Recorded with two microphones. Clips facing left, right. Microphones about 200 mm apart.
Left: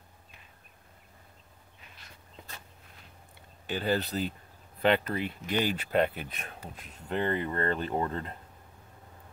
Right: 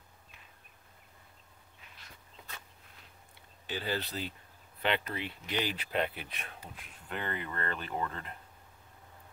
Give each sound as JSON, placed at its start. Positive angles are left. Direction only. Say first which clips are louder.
{"t": 3.6, "sound": "speech", "louder": "left 6 dB", "side_deg": 50}
{"t": 7.1, "sound": "speech", "louder": "left 8 dB", "side_deg": 30}